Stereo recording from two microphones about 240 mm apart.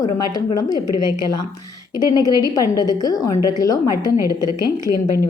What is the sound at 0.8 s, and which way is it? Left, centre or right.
Speech, left.